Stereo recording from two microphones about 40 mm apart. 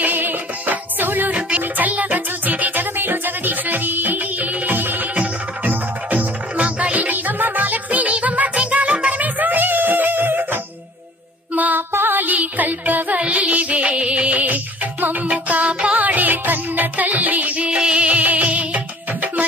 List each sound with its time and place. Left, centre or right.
0.0 s music: right
1.3 s music: right
1.8 s music: right
6.6 s music: right
11.5 s music: right
11.9 s music: right
13.1 s music: right
17.7 s music: right